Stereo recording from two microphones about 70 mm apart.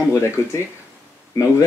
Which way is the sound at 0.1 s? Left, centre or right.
Left.